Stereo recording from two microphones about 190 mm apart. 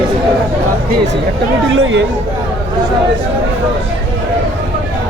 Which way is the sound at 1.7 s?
80° right.